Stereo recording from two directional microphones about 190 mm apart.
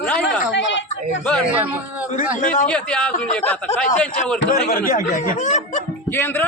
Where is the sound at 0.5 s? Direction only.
75° left (ahead or behind).